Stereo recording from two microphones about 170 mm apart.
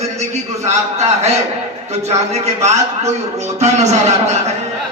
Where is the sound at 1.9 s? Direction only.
40° right (ahead or behind).